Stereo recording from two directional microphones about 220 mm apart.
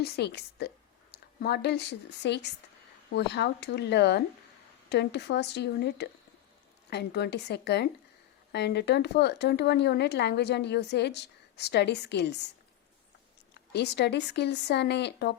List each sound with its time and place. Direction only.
0.0 s a woman's voice: 50° left (ahead or behind)
13.5 s a woman's voice: 50° left (ahead or behind)